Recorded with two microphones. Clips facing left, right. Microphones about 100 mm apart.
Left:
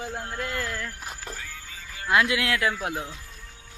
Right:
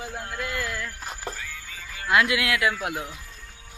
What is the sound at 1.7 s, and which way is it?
Speech, 25° left (ahead or behind).